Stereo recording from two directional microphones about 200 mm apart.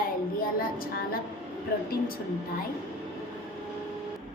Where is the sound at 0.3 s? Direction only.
45° left (ahead or behind).